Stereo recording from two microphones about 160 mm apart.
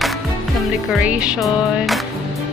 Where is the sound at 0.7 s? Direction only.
5° right (ahead or behind).